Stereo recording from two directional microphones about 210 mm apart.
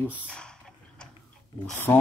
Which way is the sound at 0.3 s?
5° left (ahead or behind).